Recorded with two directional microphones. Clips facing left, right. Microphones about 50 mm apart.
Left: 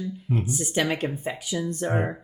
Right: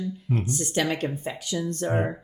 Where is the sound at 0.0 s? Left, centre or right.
Centre.